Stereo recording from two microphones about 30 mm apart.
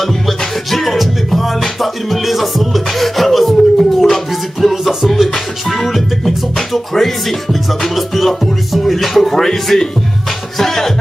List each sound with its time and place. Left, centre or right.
0.0 s music: centre
6.9 s speech: centre
7.8 s music: centre
9.4 s speech: centre